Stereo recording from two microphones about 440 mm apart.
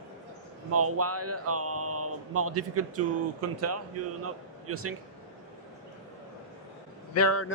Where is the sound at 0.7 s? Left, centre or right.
Right.